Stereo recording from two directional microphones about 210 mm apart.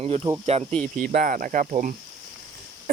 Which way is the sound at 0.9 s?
40° right (ahead or behind).